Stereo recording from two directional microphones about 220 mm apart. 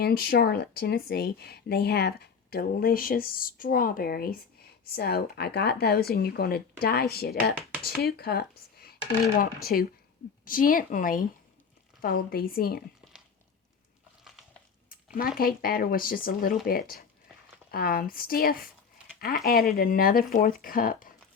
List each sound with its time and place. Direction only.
0.0 s speech: 45° left (ahead or behind)
14.8 s speech: 40° left (ahead or behind)